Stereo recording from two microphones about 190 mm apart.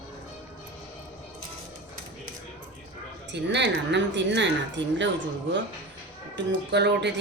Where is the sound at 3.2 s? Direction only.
65° right (ahead or behind).